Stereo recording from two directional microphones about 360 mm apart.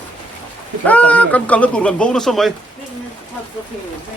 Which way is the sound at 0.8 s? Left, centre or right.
Centre.